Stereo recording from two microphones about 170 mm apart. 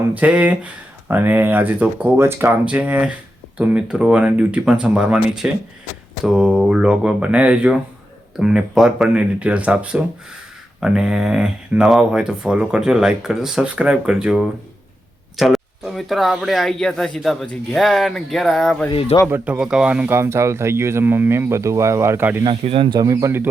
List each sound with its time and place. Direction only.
0.1 s speech: 10° right (ahead or behind)
18.9 s speech: 35° left (ahead or behind)
19.3 s speech: 5° right (ahead or behind)
22.4 s speech: 30° right (ahead or behind); by 23.5 s 15° right (ahead or behind)